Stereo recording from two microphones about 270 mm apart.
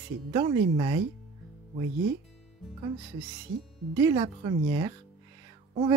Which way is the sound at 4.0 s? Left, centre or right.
Centre.